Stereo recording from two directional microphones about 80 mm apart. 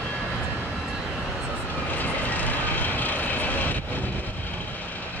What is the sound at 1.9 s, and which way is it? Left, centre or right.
Vehicle, left.